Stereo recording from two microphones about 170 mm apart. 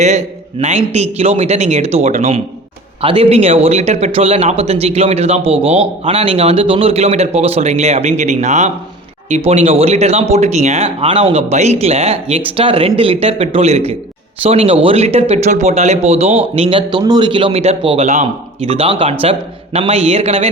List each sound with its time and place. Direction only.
0.0 s speech: 40° right (ahead or behind)